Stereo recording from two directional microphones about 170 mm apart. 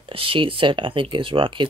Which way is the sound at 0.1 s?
30° right (ahead or behind).